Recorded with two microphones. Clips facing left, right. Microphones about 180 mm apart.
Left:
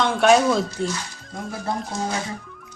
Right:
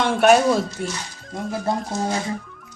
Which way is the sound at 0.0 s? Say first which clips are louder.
Right 1 dB; 5° right (ahead or behind).